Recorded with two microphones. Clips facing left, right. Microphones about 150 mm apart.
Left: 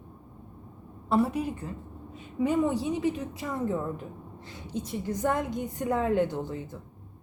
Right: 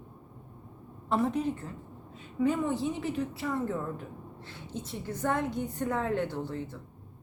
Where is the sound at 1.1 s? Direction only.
10° left (ahead or behind).